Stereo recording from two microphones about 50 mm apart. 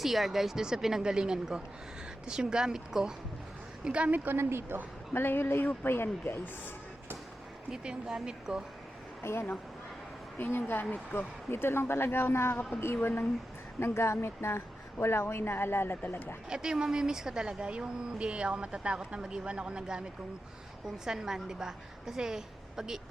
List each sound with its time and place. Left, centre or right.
0.0 s a woman's voice: centre
3.8 s a woman's voice: right
4.4 s speech: right
5.1 s speech: left
7.7 s a woman's voice: centre
9.2 s speech: left
10.3 s speech: left
13.7 s speech: left
16.0 s speech: left
16.5 s a woman's voice: centre